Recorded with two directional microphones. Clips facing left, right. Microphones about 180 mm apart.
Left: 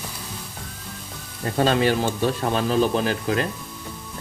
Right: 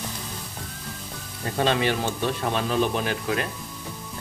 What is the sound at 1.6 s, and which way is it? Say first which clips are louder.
Speech: left 4 dB; 40° left (ahead or behind).